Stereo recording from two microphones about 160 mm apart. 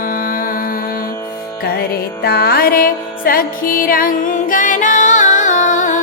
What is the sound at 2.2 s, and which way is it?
Music, 80° left.